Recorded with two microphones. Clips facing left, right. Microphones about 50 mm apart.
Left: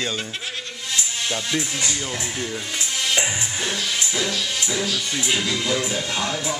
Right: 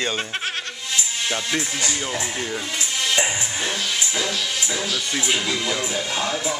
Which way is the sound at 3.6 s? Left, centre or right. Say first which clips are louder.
Even; centre.